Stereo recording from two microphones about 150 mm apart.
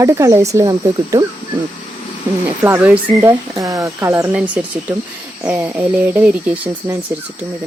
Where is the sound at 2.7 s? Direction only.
10° right (ahead or behind).